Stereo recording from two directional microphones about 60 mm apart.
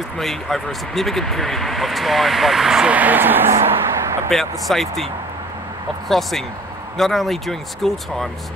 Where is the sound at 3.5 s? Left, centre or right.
Right.